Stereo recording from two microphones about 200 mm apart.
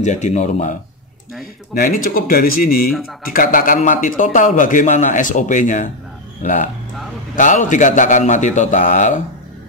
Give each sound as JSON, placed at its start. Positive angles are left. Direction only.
{"t": 0.0, "sound": "a man's voice", "side_deg": 35}
{"t": 1.8, "sound": "a man's voice", "side_deg": 45}